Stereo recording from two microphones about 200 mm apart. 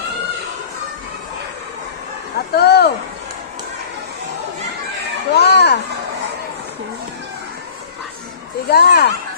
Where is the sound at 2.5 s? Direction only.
55° left (ahead or behind).